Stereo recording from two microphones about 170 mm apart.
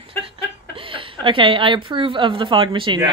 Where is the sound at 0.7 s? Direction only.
30° right (ahead or behind).